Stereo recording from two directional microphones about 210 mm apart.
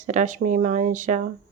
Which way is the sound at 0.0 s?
35° right (ahead or behind).